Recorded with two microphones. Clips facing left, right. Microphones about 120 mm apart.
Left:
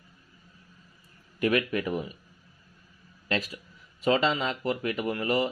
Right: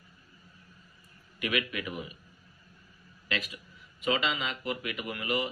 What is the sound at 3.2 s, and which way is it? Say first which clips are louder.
A man's voice: left 5 dB; 35° left (ahead or behind).